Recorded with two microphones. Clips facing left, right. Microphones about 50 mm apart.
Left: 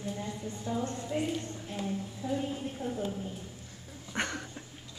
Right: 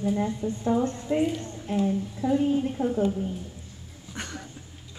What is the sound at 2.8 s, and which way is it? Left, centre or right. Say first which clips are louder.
Speech: right 9 dB; right.